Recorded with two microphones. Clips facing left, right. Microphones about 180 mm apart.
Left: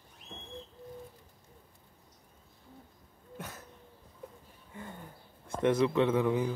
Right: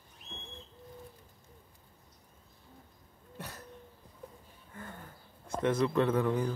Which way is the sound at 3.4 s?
Centre (ahead or behind).